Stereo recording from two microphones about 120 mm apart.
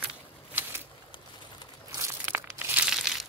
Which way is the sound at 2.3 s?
15° right (ahead or behind).